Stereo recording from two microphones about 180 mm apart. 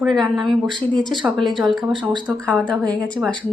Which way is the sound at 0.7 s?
25° right (ahead or behind).